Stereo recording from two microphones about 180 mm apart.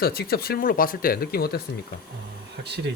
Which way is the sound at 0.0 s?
60° left (ahead or behind).